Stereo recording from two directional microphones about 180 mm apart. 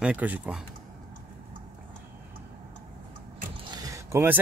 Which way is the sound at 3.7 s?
20° right (ahead or behind).